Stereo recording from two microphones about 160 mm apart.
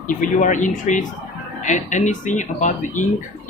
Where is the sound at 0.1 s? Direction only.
55° left (ahead or behind).